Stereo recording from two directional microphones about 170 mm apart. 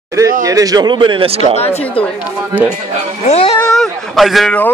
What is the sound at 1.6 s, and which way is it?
Speech, 40° left (ahead or behind).